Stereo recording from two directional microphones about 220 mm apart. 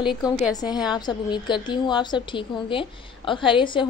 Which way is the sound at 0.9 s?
20° left (ahead or behind).